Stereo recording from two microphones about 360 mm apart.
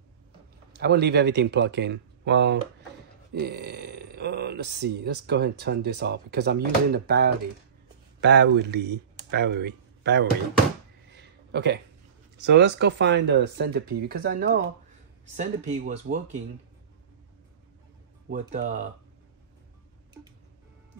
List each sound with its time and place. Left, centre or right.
0.7 s speech: right
11.1 s a sound: right
12.4 s speech: right
18.3 s speech: right